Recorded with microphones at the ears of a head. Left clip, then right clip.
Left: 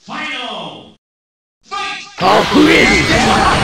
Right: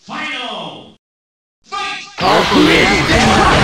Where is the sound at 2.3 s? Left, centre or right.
Centre.